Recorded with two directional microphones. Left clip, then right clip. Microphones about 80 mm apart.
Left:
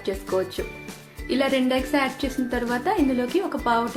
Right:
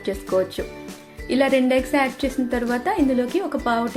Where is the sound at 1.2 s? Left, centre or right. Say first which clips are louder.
Right 4 dB; right.